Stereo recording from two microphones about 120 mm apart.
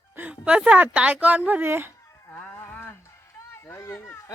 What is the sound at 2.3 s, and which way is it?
Livestock, 10° left (ahead or behind).